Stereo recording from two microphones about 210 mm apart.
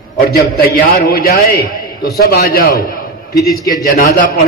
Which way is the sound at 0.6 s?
45° left (ahead or behind).